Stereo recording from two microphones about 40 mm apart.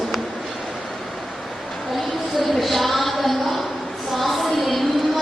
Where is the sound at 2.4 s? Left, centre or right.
Centre.